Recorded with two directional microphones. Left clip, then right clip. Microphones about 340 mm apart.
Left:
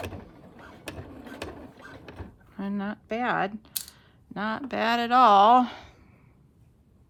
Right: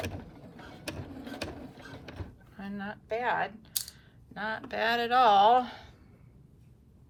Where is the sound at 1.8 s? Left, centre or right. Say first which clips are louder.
Left 2 dB; centre.